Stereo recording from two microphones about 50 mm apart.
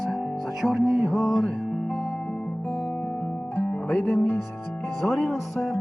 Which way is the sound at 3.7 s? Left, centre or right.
Left.